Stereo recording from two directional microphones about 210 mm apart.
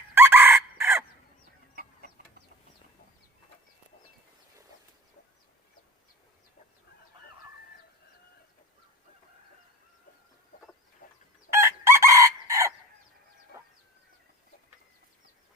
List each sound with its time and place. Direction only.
0.1 s chicken: 10° right (ahead or behind)
11.0 s chicken: 40° left (ahead or behind)
11.5 s chicken: 15° right (ahead or behind)